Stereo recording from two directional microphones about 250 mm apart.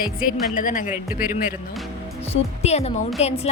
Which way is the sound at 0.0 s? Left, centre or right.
Left.